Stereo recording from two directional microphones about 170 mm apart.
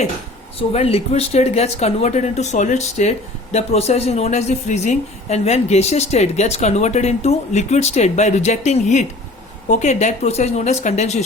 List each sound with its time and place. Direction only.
0.7 s speech: 35° left (ahead or behind)